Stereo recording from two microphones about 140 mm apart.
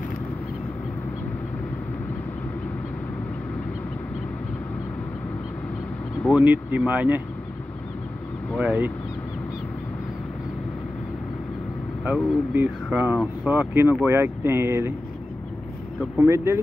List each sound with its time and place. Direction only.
6.3 s speech: 10° right (ahead or behind)
8.5 s speech: 10° right (ahead or behind)
12.0 s speech: 10° right (ahead or behind)
16.2 s speech: 20° right (ahead or behind)